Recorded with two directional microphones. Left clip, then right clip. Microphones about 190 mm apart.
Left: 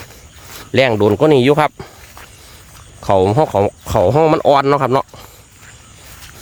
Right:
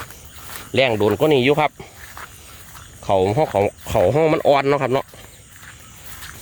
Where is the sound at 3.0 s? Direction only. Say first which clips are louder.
Left 5 dB; 45° left (ahead or behind); by 5.0 s 25° left (ahead or behind).